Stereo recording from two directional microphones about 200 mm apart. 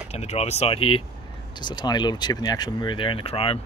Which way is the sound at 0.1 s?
30° left (ahead or behind).